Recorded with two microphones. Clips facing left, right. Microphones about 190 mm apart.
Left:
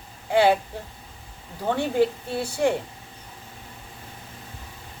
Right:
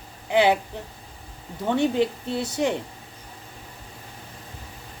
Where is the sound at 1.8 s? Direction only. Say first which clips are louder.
Even; 20° right (ahead or behind).